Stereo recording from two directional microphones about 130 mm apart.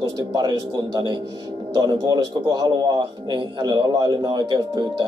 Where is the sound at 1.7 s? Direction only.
35° right (ahead or behind).